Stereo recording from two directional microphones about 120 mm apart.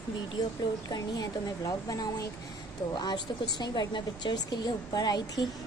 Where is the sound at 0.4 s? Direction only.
35° left (ahead or behind).